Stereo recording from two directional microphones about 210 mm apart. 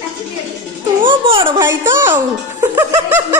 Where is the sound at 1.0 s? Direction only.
25° right (ahead or behind).